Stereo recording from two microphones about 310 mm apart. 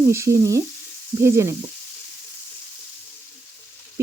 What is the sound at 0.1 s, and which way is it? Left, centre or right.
Speech, centre.